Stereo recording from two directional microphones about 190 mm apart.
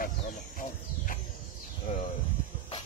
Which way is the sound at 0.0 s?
45° left (ahead or behind).